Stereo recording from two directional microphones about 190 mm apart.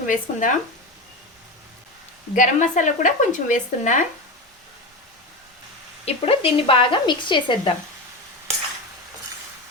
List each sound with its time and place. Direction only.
0.0 s speech: 45° left (ahead or behind)
2.3 s speech: 40° left (ahead or behind)
6.1 s speech: 30° left (ahead or behind)